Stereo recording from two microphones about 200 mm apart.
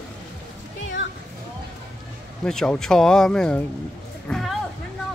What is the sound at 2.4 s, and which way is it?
Speech, 5° left (ahead or behind).